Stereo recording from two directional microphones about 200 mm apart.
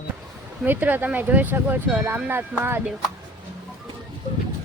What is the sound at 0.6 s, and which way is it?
Speech, 10° right (ahead or behind).